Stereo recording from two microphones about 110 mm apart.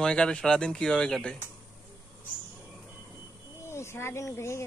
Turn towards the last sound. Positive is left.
turn(degrees=25)  # may be behind; listen again after turning